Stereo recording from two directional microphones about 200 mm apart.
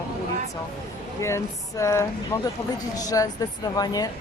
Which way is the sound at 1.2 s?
15° left (ahead or behind).